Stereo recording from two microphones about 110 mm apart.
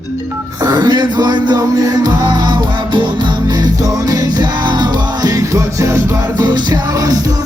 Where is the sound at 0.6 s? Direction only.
35° right (ahead or behind).